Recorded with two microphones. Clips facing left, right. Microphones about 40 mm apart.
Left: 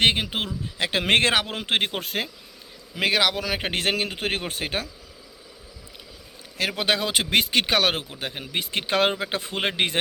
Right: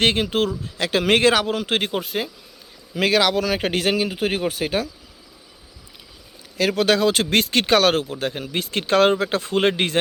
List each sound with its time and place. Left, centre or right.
0.0 s speech: centre
0.4 s a man's voice: left
2.0 s speech: left
2.9 s speech: centre
3.7 s speech: left
6.7 s speech: centre